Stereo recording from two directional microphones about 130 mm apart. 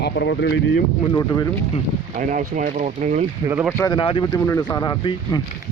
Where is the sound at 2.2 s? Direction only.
85° right; by 3.3 s 65° right (ahead or behind).